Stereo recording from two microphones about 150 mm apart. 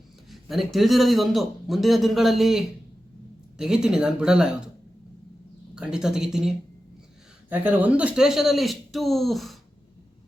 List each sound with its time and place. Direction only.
0.3 s a man's voice: centre (ahead or behind)
5.7 s a man's voice: 5° right (ahead or behind)
7.5 s a man's voice: 10° right (ahead or behind)